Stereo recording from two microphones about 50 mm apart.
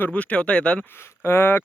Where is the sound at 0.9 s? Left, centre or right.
Left.